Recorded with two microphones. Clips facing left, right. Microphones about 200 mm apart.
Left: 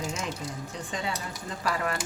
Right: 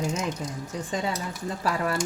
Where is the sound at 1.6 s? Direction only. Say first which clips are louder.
Right 2 dB; 40° right (ahead or behind).